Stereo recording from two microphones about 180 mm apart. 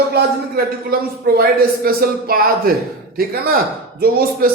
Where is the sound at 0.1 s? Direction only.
55° right (ahead or behind).